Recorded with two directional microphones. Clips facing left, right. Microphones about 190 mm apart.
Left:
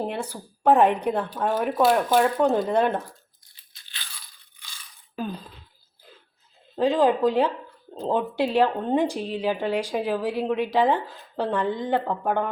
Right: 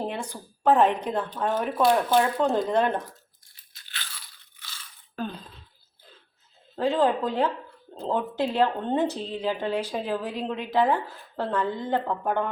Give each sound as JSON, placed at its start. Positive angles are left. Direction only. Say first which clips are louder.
{"t": 0.1, "sound": "a woman's voice", "louder": "left 3 dB", "side_deg": 10}
{"t": 4.6, "sound": "a sound", "louder": "right 1 dB", "side_deg": 10}
{"t": 6.7, "sound": "a woman's voice", "louder": "left 3 dB", "side_deg": 15}